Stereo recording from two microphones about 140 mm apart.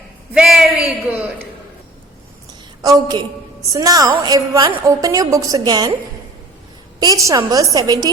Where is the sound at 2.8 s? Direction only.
30° right (ahead or behind).